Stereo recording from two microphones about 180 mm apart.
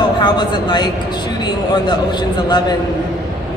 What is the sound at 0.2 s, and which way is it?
A woman's voice, 25° left (ahead or behind).